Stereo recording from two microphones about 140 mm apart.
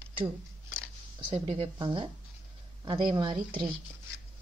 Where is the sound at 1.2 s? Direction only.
40° right (ahead or behind).